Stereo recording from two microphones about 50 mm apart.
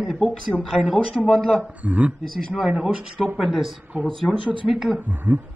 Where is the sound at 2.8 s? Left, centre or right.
Centre.